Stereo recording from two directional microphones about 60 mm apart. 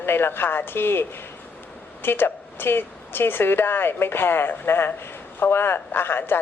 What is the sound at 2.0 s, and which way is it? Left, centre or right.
Speech, left.